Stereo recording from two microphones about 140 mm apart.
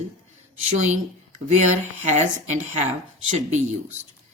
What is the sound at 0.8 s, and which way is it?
Speech, 60° right (ahead or behind).